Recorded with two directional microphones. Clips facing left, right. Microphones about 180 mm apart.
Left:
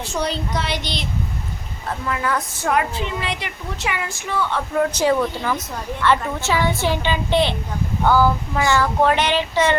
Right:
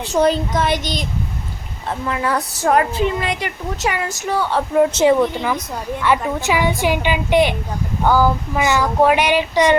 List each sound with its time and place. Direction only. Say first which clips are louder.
0.1 s a woman's voice: right 9 dB; 50° right (ahead or behind)
2.0 s a woman's voice: right 2 dB; 30° right (ahead or behind)
4.8 s a woman's voice: right 5 dB; 25° right (ahead or behind)